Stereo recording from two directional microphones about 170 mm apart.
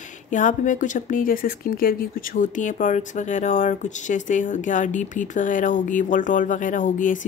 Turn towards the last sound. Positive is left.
turn(degrees=50)  # may be behind; listen again after turning